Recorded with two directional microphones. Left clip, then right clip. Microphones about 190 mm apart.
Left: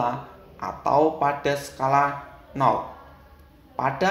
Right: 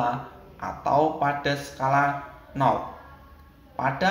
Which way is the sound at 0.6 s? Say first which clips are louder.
Left 2 dB; 45° left (ahead or behind).